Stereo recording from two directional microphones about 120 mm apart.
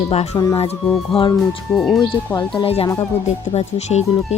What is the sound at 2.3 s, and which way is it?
Speech, 35° left (ahead or behind).